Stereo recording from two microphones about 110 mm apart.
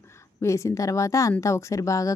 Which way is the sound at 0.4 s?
25° left (ahead or behind).